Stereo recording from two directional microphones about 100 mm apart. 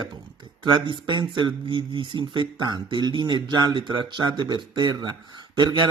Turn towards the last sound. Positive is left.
turn(degrees=-50)  # may be behind; listen again after turning